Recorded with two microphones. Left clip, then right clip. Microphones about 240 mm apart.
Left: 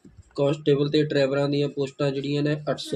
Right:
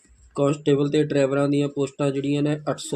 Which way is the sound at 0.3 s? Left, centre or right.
Right.